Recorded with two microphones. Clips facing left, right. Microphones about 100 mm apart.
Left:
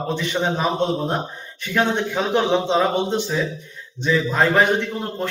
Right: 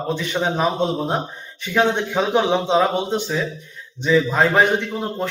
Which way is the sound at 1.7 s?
15° right (ahead or behind).